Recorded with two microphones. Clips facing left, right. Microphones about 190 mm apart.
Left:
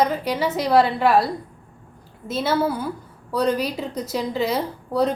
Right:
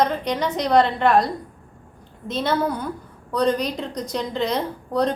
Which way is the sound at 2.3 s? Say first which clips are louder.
Left 1 dB; 5° left (ahead or behind).